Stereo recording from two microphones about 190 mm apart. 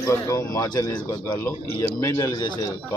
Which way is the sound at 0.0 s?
15° left (ahead or behind).